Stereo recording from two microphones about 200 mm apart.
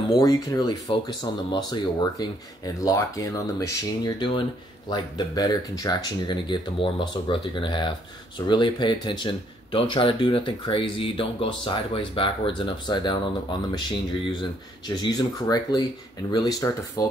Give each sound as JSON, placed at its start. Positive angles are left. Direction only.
{"t": 0.2, "sound": "speech", "side_deg": 20}